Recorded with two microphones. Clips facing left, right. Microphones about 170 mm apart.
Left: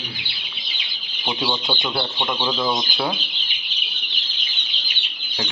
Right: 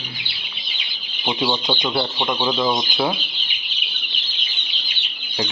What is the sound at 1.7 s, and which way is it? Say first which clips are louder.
Speech: right 3 dB; 15° right (ahead or behind).